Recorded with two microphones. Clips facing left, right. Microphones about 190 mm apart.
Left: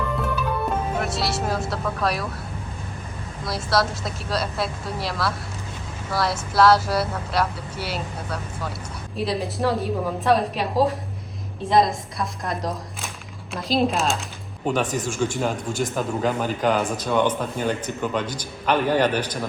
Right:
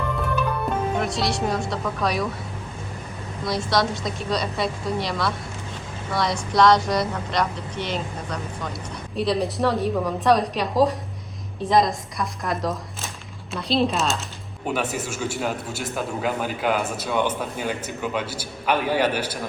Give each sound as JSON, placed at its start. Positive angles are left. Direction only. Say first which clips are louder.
{"t": 0.9, "sound": "speech", "louder": "right 1 dB", "side_deg": 0}
{"t": 3.4, "sound": "speech", "louder": "right 1 dB", "side_deg": 0}